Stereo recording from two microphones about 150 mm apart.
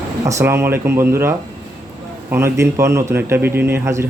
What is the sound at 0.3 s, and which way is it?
Speech, 20° right (ahead or behind).